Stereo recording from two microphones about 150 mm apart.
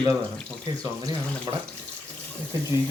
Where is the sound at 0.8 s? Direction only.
25° right (ahead or behind).